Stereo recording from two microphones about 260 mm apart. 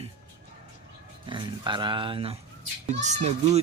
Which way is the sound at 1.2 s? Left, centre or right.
Centre.